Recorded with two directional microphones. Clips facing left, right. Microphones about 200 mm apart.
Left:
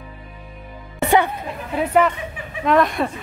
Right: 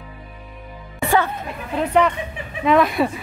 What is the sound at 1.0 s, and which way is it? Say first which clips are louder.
Music: left 2 dB; 20° left (ahead or behind).